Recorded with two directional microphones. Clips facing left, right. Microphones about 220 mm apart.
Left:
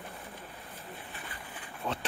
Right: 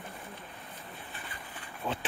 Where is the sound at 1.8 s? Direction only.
5° right (ahead or behind).